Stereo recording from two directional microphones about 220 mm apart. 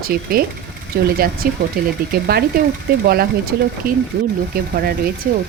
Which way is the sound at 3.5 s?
45° right (ahead or behind).